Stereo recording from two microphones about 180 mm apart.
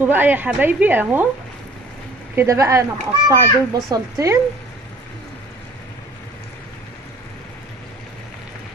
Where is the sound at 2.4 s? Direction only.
15° right (ahead or behind).